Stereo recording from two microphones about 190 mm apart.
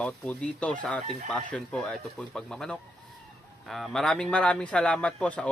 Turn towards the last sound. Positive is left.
turn(degrees=5)  # may be behind; listen again after turning